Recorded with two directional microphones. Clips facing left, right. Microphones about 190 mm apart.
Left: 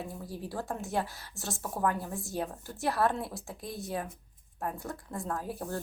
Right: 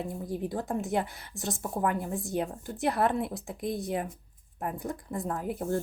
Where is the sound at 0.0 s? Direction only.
20° right (ahead or behind).